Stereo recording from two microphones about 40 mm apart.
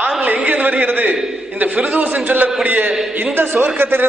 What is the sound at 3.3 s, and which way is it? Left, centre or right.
Speech, right.